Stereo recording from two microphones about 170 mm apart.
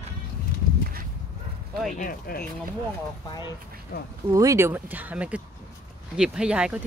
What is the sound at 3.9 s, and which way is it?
Speech, 55° left (ahead or behind).